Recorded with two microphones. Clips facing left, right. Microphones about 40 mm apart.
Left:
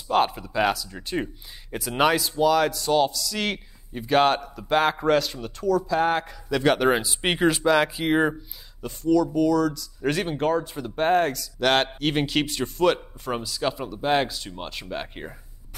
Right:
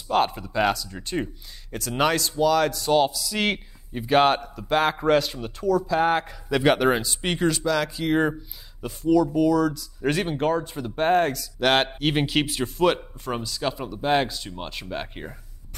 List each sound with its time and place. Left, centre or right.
0.1 s speech: centre
6.8 s speech: centre
7.2 s speech: centre
8.8 s speech: centre